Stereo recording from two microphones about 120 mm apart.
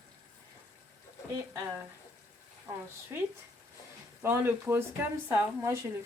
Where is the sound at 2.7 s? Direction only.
30° right (ahead or behind).